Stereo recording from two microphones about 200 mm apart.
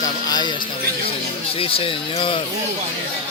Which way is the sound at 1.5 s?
25° left (ahead or behind).